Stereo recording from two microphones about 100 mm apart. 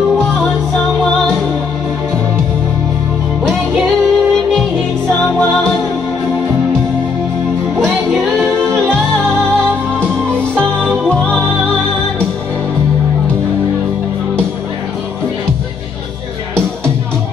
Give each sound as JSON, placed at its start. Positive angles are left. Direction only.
{"t": 3.4, "sound": "music", "side_deg": 5}
{"t": 11.1, "sound": "music", "side_deg": 10}